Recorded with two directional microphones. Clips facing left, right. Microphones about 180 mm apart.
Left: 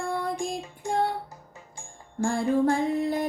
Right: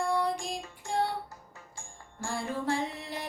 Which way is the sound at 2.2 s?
50° left (ahead or behind).